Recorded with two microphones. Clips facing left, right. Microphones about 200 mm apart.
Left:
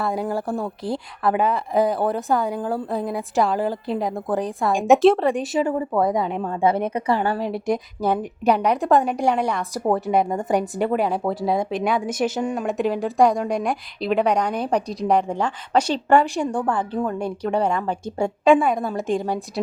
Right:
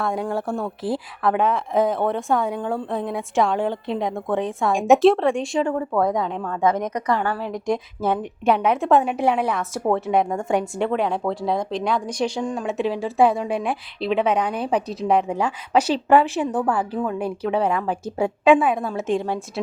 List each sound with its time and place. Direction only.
0.0 s a woman's voice: 5° left (ahead or behind)
6.9 s a woman's voice: 30° left (ahead or behind)
7.3 s a woman's voice: 15° left (ahead or behind)
7.7 s speech: centre (ahead or behind)